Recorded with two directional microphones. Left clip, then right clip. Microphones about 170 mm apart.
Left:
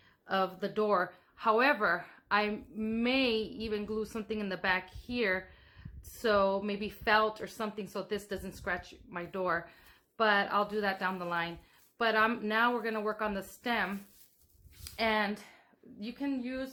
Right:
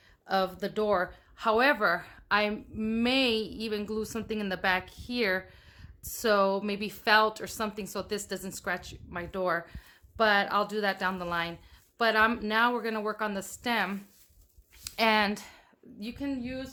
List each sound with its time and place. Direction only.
0.3 s a woman's voice: 25° right (ahead or behind)